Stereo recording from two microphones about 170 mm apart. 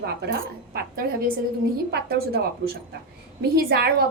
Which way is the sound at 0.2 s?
65° right (ahead or behind).